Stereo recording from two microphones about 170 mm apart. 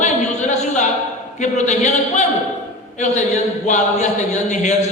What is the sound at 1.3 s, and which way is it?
Speech, 45° left (ahead or behind).